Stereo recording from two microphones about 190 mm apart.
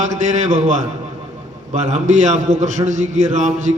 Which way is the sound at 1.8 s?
35° right (ahead or behind).